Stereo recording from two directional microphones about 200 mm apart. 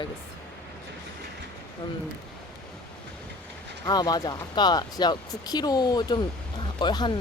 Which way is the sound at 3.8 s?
20° left (ahead or behind).